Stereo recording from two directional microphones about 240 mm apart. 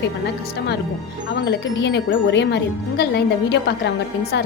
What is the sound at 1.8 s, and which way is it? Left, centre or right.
Speech, left.